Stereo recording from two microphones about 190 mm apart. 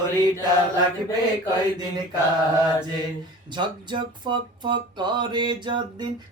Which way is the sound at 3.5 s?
25° right (ahead or behind).